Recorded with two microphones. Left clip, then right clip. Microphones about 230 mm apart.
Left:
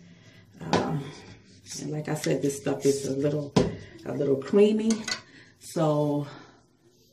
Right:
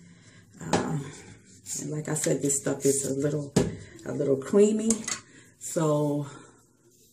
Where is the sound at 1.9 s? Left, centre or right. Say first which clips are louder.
Even; centre.